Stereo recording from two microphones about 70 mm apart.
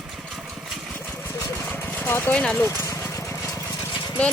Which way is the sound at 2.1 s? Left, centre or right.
Left.